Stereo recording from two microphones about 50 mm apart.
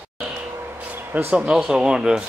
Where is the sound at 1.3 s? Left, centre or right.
Centre.